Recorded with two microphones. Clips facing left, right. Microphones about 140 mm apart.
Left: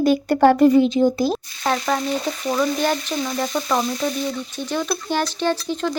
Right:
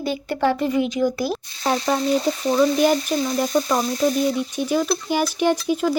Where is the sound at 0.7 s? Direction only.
30° left (ahead or behind).